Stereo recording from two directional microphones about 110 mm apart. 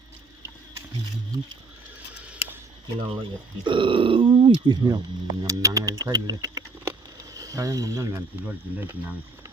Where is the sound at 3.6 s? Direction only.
50° right (ahead or behind); by 8.3 s 30° right (ahead or behind).